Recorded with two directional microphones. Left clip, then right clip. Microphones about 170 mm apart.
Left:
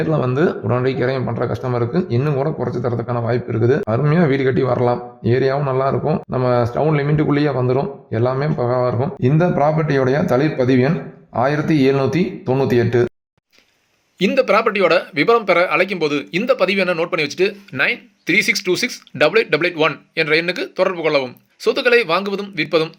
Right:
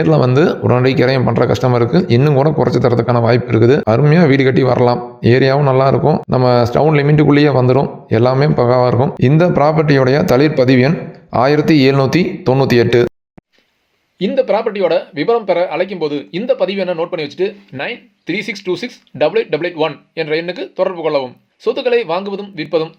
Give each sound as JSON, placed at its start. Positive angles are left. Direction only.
{"t": 0.0, "sound": "speech", "side_deg": -30}
{"t": 14.4, "sound": "speech", "side_deg": 90}
{"t": 16.1, "sound": "speech", "side_deg": 0}
{"t": 16.6, "sound": "speech", "side_deg": 90}